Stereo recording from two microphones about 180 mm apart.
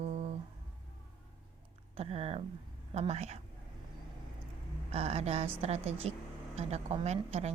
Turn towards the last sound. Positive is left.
turn(degrees=-35)  # may be behind; listen again after turning